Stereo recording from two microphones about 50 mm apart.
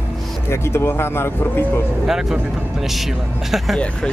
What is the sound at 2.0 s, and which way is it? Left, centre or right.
Speech, centre.